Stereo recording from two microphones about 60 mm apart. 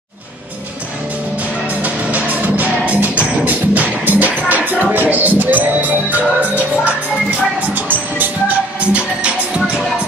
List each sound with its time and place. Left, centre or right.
1.7 s music: right